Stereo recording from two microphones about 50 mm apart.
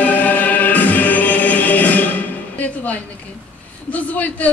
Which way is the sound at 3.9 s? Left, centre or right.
Left.